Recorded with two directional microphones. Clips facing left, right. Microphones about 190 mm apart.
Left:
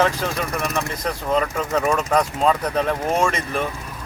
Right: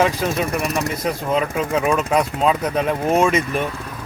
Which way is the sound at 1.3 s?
10° right (ahead or behind).